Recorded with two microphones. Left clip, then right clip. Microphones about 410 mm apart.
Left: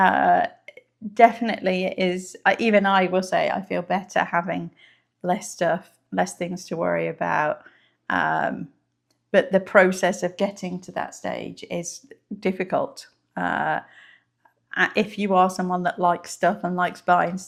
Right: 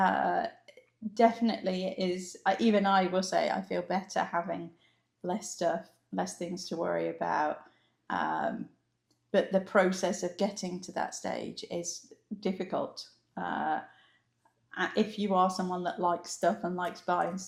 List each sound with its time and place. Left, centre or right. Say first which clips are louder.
0.0 s burping: left 10 dB; left
1.1 s speech: left 9 dB; left
9.7 s speech: left 11 dB; left